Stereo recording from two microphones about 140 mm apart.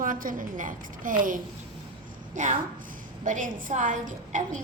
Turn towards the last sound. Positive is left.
turn(degrees=-65)  # may be behind; listen again after turning